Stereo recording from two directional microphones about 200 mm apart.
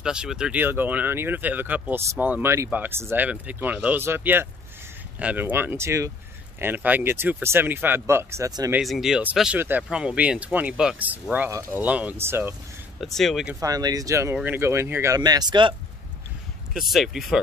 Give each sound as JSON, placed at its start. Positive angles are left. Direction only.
{"t": 0.0, "sound": "speech", "side_deg": -5}
{"t": 8.7, "sound": "speech", "side_deg": 0}
{"t": 13.0, "sound": "speech", "side_deg": 0}
{"t": 13.6, "sound": "speech", "side_deg": -20}
{"t": 16.7, "sound": "speech", "side_deg": 0}